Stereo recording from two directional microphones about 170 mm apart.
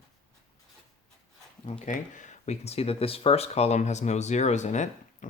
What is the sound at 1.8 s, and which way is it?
Speech, 45° left (ahead or behind).